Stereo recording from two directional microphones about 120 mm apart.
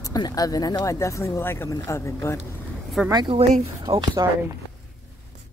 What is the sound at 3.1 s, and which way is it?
Speech, 35° right (ahead or behind).